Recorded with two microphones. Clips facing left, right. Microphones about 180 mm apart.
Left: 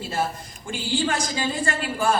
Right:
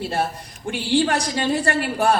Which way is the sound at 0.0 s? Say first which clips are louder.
Right 3 dB; 65° right (ahead or behind).